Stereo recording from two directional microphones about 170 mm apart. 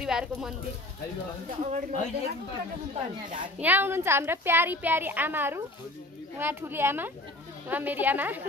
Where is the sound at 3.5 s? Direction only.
10° right (ahead or behind).